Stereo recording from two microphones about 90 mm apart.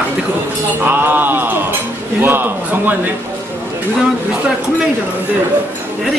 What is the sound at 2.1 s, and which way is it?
Speech, 25° right (ahead or behind).